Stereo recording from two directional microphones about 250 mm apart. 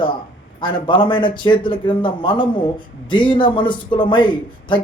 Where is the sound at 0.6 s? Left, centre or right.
Centre.